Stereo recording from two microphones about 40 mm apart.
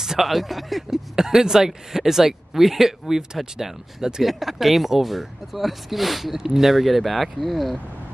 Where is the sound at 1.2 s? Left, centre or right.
Centre.